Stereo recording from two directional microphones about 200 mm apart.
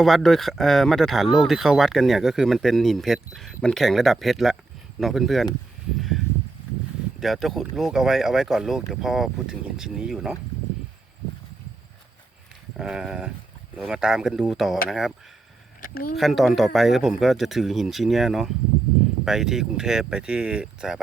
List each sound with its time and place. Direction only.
0.0 s speech: centre (ahead or behind)
7.2 s speech: centre (ahead or behind)
12.7 s speech: centre (ahead or behind)
15.8 s speech: 45° left (ahead or behind)
16.1 s speech: centre (ahead or behind)